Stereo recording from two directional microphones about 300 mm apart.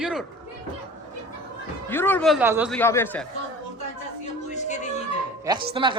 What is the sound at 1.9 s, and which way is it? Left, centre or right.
Speech, centre.